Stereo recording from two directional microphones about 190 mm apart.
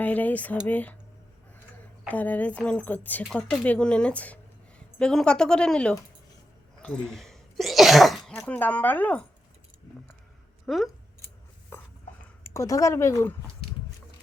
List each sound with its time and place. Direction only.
0.0 s a woman's voice: 10° left (ahead or behind)
6.7 s sneeze: 5° left (ahead or behind)
8.4 s speech: 10° left (ahead or behind)
10.7 s speech: 5° left (ahead or behind)
11.7 s a sound: 10° left (ahead or behind)
12.4 s speech: 15° left (ahead or behind)